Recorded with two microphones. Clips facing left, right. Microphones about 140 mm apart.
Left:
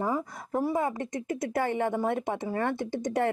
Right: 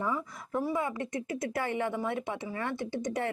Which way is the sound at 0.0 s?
40° left (ahead or behind).